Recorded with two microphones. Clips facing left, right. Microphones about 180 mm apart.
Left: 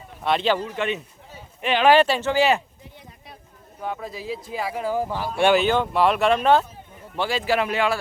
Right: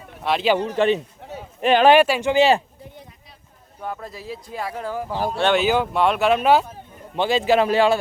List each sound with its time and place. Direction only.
0.3 s speech: centre (ahead or behind)
0.8 s a man's voice: 30° right (ahead or behind)
1.2 s a sound: 70° right (ahead or behind)
1.6 s speech: 40° right (ahead or behind)
1.9 s speech: 10° right (ahead or behind)
2.3 s a man's voice: 25° right (ahead or behind)
3.8 s speech: centre (ahead or behind)
5.5 s speech: 5° right (ahead or behind)
7.2 s a man's voice: 20° right (ahead or behind)